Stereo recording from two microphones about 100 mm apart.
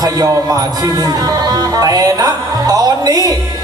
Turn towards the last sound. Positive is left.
turn(degrees=-40)  # may be behind; listen again after turning